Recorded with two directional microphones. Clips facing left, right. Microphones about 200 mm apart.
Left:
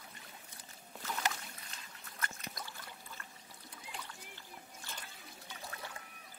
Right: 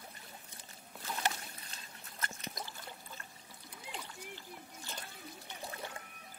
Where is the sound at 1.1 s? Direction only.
30° right (ahead or behind).